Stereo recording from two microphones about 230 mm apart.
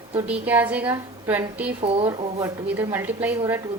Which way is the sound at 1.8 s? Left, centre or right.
Right.